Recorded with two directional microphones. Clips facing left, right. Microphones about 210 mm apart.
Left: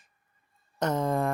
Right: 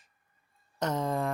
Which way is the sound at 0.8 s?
50° left (ahead or behind).